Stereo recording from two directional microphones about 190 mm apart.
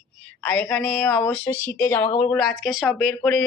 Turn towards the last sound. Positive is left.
turn(degrees=0)  # may be behind; listen again after turning